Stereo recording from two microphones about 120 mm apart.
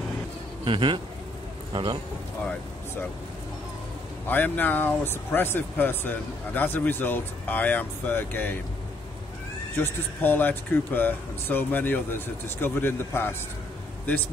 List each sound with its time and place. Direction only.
0.7 s a man's voice: 45° right (ahead or behind)
4.3 s speech: 15° left (ahead or behind)
9.8 s speech: 15° left (ahead or behind)